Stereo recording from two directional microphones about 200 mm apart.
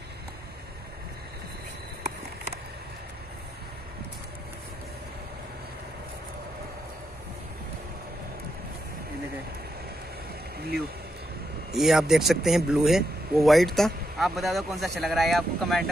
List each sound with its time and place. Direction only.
11.7 s speech: centre (ahead or behind)